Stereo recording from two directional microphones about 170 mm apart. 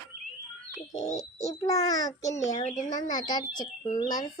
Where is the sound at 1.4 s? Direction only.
20° left (ahead or behind).